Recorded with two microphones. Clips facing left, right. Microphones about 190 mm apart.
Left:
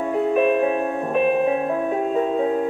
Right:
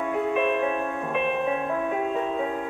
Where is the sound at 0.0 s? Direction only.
35° left (ahead or behind).